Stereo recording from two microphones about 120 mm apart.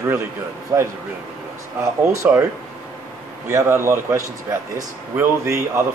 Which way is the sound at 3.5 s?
20° right (ahead or behind).